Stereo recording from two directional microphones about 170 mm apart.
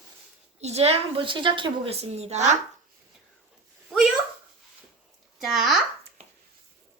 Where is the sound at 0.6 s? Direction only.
40° right (ahead or behind).